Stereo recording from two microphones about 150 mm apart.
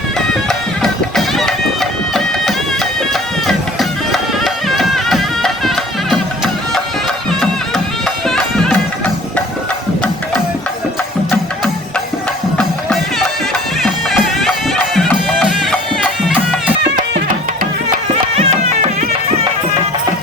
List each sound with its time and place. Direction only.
0.4 s music: 5° left (ahead or behind)
8.3 s music: 5° left (ahead or behind)
12.5 s music: centre (ahead or behind)
18.3 s music: 50° right (ahead or behind)